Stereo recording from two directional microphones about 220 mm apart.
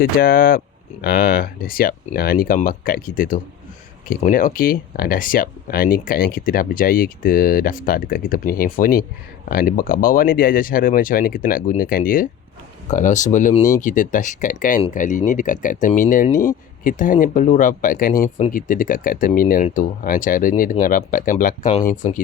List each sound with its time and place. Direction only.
0.0 s speech: 40° left (ahead or behind)